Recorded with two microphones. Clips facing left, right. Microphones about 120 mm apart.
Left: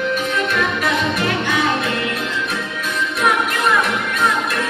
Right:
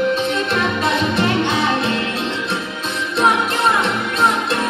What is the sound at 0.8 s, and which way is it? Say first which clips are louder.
Music: right 2 dB; 25° right (ahead or behind).